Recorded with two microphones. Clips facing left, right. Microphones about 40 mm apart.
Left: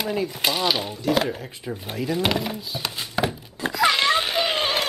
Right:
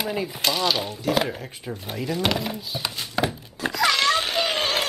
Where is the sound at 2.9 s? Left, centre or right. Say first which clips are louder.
Left 1 dB; centre.